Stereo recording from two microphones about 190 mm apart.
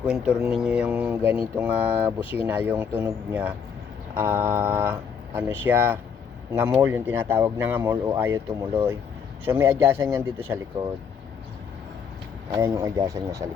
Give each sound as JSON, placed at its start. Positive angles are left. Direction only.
{"t": 0.0, "sound": "speech", "side_deg": -5}
{"t": 12.5, "sound": "speech", "side_deg": -15}